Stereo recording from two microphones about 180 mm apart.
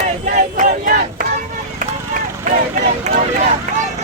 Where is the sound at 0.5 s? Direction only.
45° right (ahead or behind).